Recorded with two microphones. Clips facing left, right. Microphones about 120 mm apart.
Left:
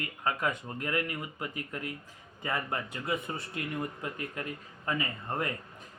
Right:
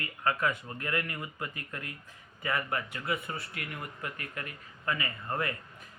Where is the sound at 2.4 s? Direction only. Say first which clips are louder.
Right 1 dB; 25° left (ahead or behind).